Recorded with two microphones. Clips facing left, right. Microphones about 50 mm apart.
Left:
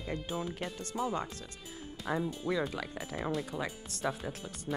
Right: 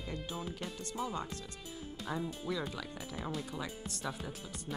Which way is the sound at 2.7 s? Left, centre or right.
Left.